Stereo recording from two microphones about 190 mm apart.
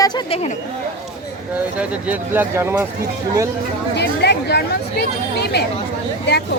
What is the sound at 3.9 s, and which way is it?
Speech, 60° left (ahead or behind).